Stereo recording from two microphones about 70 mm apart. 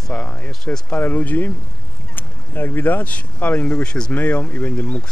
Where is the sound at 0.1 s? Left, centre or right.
Centre.